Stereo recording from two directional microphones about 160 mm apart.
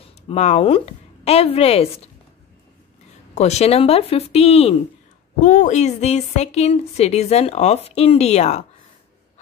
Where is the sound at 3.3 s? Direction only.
45° left (ahead or behind).